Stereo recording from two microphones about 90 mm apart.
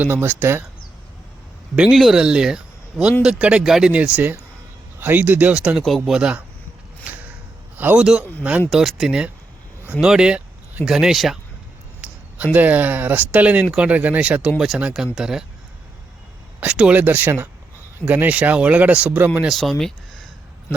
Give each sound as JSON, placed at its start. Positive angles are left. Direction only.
{"t": 0.0, "sound": "speech", "side_deg": -20}
{"t": 1.7, "sound": "speech", "side_deg": -5}
{"t": 4.9, "sound": "speech", "side_deg": -25}
{"t": 7.0, "sound": "a sound", "side_deg": -20}
{"t": 7.8, "sound": "a man's voice", "side_deg": -20}
{"t": 8.7, "sound": "speech", "side_deg": 0}
{"t": 12.0, "sound": "a sound", "side_deg": -10}
{"t": 12.5, "sound": "speech", "side_deg": -20}
{"t": 16.6, "sound": "speech", "side_deg": -10}
{"t": 19.5, "sound": "speech", "side_deg": 0}